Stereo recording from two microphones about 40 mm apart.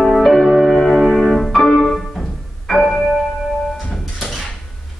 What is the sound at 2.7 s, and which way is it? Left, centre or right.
Music, left.